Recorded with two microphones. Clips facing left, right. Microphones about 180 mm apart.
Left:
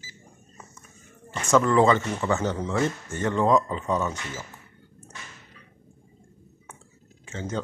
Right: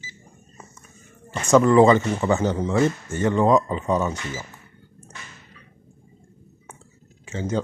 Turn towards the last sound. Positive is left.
turn(degrees=-10)  # may be behind; listen again after turning